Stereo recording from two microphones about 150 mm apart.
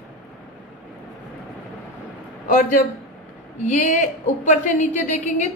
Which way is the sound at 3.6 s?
55° left (ahead or behind).